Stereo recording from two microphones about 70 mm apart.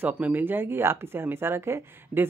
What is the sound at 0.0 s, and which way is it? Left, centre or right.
Speech, right.